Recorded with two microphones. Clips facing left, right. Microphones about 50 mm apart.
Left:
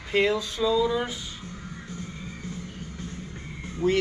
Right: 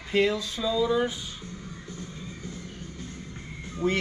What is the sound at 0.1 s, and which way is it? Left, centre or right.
Speech, centre.